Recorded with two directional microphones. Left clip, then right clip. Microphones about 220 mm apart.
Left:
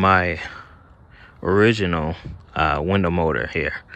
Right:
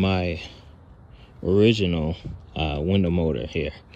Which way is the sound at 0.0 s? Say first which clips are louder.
Left 9 dB; 5° right (ahead or behind).